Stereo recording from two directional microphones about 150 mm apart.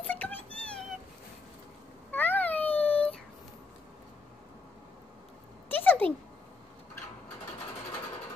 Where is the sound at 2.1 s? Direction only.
10° left (ahead or behind).